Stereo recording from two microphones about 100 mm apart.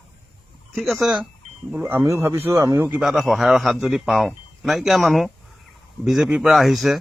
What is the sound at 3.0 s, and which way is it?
Speech, centre (ahead or behind).